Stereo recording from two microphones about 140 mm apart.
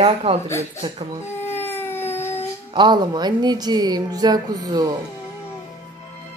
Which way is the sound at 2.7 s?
35° right (ahead or behind).